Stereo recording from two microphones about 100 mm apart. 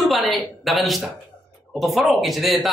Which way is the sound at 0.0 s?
Centre (ahead or behind).